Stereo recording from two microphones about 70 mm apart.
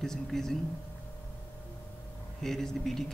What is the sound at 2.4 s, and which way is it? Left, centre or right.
Speech, centre.